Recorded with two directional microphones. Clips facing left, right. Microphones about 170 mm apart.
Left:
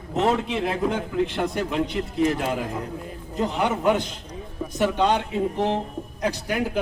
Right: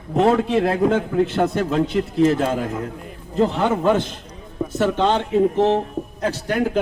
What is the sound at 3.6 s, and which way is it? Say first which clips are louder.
A man's voice: right 3 dB; 15° left (ahead or behind).